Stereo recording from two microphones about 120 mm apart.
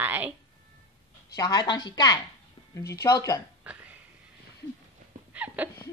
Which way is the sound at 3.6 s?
10° right (ahead or behind).